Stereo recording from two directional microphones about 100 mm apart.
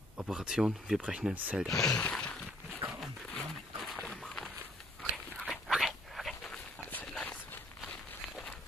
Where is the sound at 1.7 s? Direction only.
30° left (ahead or behind).